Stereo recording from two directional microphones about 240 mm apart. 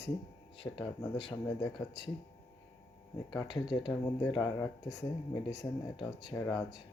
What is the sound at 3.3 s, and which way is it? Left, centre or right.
Speech, centre.